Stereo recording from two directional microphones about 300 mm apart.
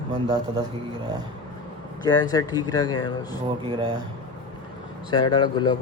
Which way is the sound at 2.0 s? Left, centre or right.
Centre.